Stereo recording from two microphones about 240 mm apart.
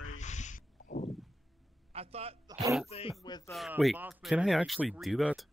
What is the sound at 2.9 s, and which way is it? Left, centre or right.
Speech, left.